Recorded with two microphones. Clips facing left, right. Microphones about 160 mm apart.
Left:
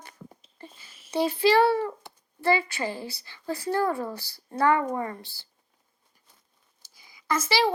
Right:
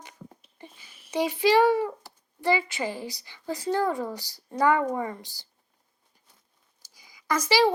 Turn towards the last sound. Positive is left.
turn(degrees=-15)  # may be behind; listen again after turning